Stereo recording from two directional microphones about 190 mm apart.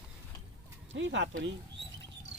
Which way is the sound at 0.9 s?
75° right (ahead or behind).